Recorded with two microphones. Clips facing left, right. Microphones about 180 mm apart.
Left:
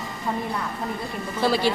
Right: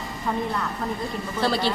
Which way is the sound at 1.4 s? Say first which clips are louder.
Left 2 dB; 10° left (ahead or behind).